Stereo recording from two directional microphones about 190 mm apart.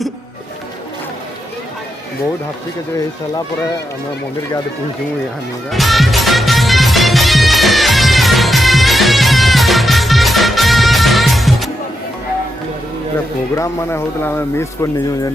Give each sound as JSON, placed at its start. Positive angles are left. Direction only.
{"t": 5.7, "sound": "music", "side_deg": 0}
{"t": 13.6, "sound": "speech", "side_deg": 15}